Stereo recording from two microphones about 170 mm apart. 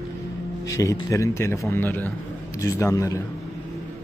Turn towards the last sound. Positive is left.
turn(degrees=20)  # may be behind; listen again after turning